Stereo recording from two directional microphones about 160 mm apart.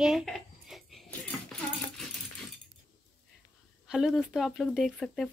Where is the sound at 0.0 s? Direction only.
Centre (ahead or behind).